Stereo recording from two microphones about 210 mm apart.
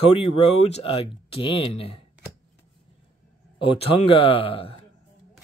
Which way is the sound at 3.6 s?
25° left (ahead or behind).